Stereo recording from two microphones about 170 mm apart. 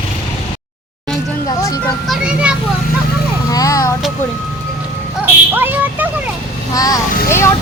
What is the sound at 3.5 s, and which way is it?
Vehicle, 20° left (ahead or behind).